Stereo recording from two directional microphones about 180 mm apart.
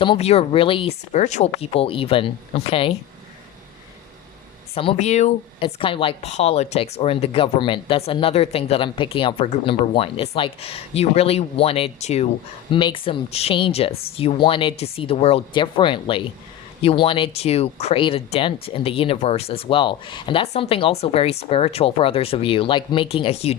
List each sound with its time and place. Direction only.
0.0 s speech: 30° left (ahead or behind)
4.7 s speech: 30° left (ahead or behind)